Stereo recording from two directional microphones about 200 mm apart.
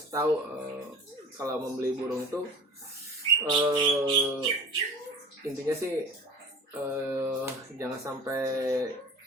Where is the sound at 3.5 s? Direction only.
20° right (ahead or behind).